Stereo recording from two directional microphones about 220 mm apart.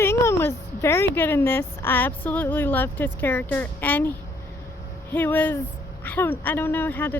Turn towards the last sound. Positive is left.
turn(degrees=10)  # may be behind; listen again after turning